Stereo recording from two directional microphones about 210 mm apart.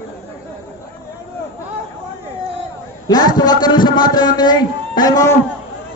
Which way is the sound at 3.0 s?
20° left (ahead or behind).